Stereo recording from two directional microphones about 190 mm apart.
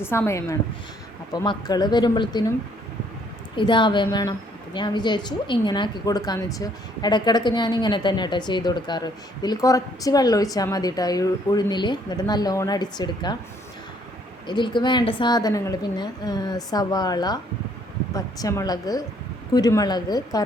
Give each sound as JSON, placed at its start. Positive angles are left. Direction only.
{"t": 0.0, "sound": "a woman's voice", "side_deg": 10}
{"t": 3.6, "sound": "a woman's voice", "side_deg": 25}
{"t": 14.4, "sound": "a woman's voice", "side_deg": 25}